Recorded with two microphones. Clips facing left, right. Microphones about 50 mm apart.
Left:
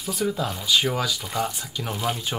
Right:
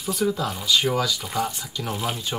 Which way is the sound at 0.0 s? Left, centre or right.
Centre.